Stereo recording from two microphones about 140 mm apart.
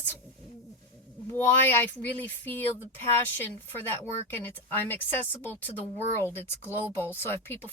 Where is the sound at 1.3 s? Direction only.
15° left (ahead or behind).